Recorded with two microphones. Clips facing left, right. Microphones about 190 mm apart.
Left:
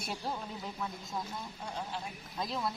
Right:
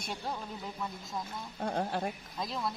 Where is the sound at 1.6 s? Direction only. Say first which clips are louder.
Right 10 dB; 55° right (ahead or behind).